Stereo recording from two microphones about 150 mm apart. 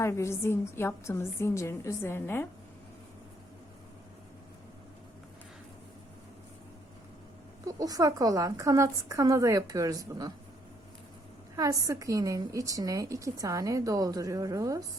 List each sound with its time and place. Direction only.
0.0 s a woman's voice: 20° left (ahead or behind)
7.8 s a woman's voice: 25° right (ahead or behind)
11.5 s a woman's voice: 20° right (ahead or behind)